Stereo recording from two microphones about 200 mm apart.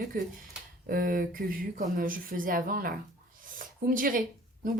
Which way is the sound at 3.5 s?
45° right (ahead or behind).